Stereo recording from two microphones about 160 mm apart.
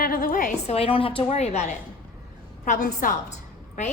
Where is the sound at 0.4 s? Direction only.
40° left (ahead or behind).